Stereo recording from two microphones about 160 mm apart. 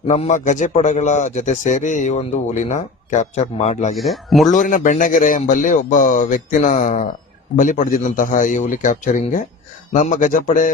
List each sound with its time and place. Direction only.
0.1 s a man's voice: 45° left (ahead or behind)
3.9 s speech: centre (ahead or behind)
4.4 s a man's voice: 55° left (ahead or behind)